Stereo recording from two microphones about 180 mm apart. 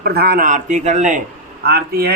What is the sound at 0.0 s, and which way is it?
Speech, 60° right (ahead or behind).